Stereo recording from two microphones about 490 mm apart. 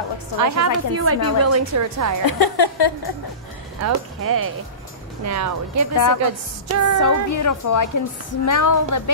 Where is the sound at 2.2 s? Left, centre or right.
Left.